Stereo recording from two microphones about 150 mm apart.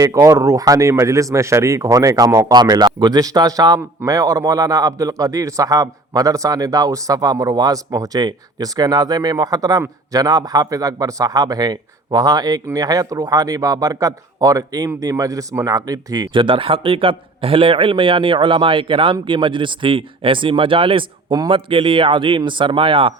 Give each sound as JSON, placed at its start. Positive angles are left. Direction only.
{"t": 0.0, "sound": "speech", "side_deg": -20}